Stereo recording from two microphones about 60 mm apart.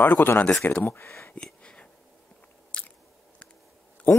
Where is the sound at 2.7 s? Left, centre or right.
Centre.